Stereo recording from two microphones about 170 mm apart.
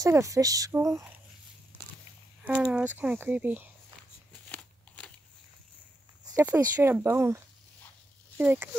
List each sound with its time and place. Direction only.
0.0 s speech: 20° right (ahead or behind)
2.4 s speech: 5° right (ahead or behind)
4.3 s a sound: 5° left (ahead or behind)
6.3 s speech: 10° right (ahead or behind)